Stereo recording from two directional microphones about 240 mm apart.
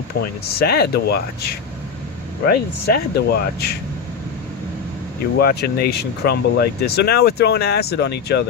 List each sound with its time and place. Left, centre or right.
0.4 s speech: left
2.5 s speech: left
5.4 s speech: left